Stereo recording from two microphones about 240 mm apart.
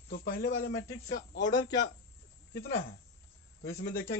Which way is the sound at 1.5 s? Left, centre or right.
Centre.